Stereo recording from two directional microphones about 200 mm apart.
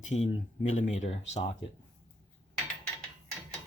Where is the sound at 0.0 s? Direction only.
35° left (ahead or behind).